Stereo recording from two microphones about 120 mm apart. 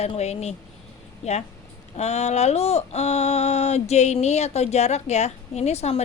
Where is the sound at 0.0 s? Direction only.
60° left (ahead or behind).